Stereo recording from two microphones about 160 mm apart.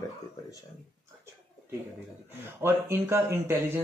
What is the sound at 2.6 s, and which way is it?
Speech, 15° right (ahead or behind).